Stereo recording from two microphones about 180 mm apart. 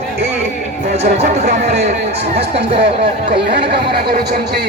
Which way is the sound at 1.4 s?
60° right (ahead or behind).